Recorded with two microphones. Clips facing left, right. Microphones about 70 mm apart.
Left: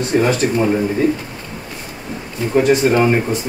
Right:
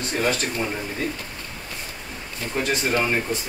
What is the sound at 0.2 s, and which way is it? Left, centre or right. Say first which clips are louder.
Speech: left 5 dB; centre.